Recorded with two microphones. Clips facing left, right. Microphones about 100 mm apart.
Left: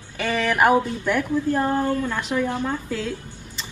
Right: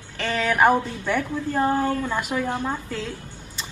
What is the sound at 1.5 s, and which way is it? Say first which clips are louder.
A woman's voice: right 4 dB; 10° right (ahead or behind).